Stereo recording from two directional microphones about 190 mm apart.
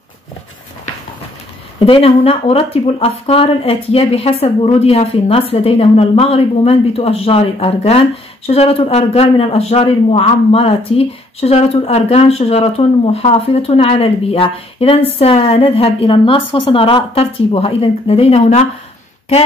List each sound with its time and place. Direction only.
1.9 s a man's voice: 30° left (ahead or behind)